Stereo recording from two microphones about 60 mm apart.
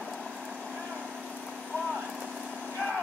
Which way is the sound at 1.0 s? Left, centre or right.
Right.